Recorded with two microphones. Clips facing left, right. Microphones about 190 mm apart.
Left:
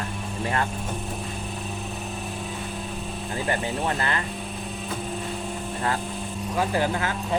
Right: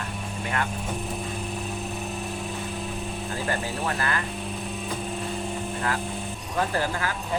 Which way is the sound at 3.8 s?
25° left (ahead or behind).